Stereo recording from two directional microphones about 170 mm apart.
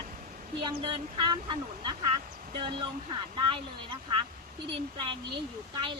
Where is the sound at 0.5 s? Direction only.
30° right (ahead or behind).